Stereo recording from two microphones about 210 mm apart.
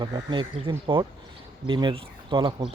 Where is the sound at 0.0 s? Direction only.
20° right (ahead or behind).